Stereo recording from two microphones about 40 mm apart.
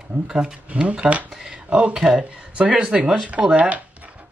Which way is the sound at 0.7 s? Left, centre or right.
Right.